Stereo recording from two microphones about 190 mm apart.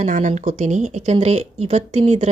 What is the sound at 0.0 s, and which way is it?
Speech, 40° right (ahead or behind).